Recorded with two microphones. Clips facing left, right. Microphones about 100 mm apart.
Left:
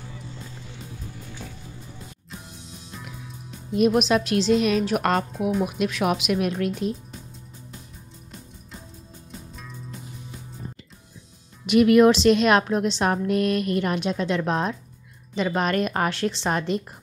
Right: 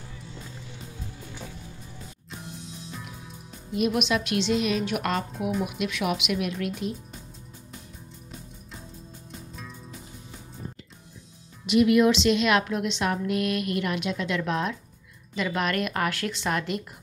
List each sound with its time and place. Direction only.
3.7 s a woman's voice: 40° left (ahead or behind)
5.3 s speech: centre (ahead or behind)
5.7 s a woman's voice: 40° left (ahead or behind)
11.6 s a woman's voice: 55° left (ahead or behind); by 16.8 s 30° left (ahead or behind)